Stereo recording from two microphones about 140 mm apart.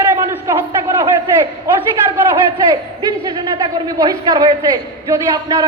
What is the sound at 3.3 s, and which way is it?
A woman's voice, 30° right (ahead or behind).